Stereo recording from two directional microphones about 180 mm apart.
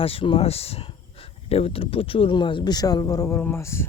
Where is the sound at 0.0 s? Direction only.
30° left (ahead or behind).